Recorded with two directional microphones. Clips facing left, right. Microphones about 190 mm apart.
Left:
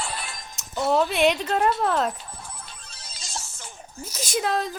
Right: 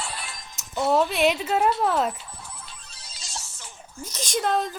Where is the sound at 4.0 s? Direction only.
10° left (ahead or behind).